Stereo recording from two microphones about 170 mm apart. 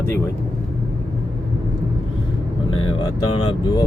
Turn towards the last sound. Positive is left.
turn(degrees=25)  # may be behind; listen again after turning